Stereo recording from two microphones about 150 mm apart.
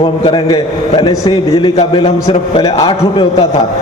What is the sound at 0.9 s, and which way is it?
A man's voice, 30° left (ahead or behind).